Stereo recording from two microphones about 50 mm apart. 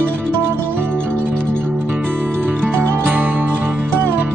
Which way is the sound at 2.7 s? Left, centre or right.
Right.